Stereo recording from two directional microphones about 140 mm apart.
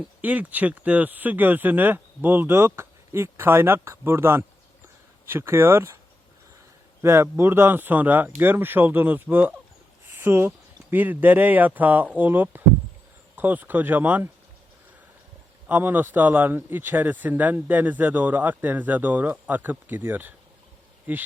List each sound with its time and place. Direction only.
0.2 s speech: 10° right (ahead or behind)
7.0 s speech: 20° right (ahead or behind)
10.1 s a sound: 15° right (ahead or behind)
10.9 s speech: 10° right (ahead or behind)
15.6 s speech: 15° right (ahead or behind)